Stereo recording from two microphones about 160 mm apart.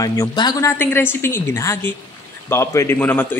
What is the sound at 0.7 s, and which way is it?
A woman's voice, 15° left (ahead or behind).